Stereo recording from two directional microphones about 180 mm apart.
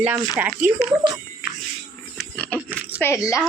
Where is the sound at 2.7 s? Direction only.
10° right (ahead or behind).